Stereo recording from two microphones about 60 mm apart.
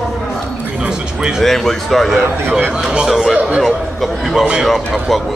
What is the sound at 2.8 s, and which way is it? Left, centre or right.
Speech, centre.